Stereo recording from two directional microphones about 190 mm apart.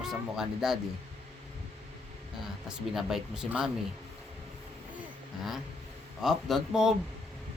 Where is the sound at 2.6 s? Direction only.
Centre (ahead or behind).